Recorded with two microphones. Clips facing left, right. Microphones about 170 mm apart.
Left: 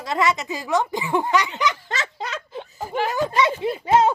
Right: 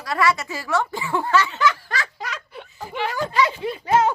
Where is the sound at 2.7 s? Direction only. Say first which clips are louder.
Left 3 dB; 45° left (ahead or behind).